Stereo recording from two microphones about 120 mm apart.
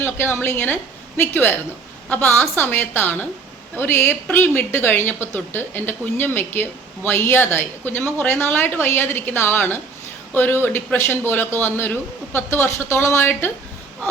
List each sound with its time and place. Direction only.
0.0 s a woman's voice: 20° left (ahead or behind)